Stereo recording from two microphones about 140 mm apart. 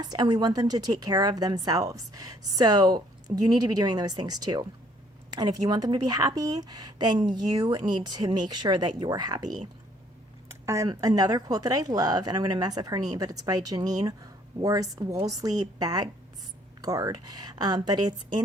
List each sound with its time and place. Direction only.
0.0 s a woman's voice: 30° right (ahead or behind)
10.5 s a woman's voice: 20° right (ahead or behind)